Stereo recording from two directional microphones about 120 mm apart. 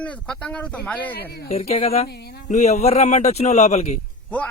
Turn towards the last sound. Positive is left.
turn(degrees=15)  # may be behind; listen again after turning